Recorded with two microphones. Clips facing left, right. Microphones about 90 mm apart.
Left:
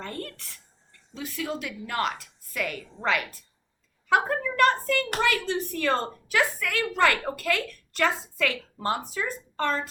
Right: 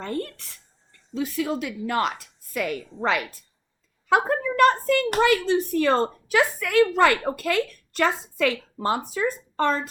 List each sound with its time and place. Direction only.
1.2 s a woman's voice: 25° right (ahead or behind)